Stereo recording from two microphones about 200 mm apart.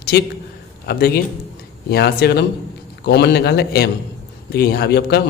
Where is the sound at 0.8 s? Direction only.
55° left (ahead or behind).